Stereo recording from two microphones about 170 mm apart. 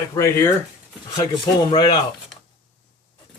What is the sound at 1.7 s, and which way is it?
Speech, 25° left (ahead or behind).